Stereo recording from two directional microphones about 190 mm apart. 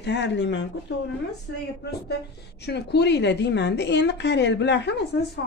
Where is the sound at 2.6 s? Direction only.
60° left (ahead or behind).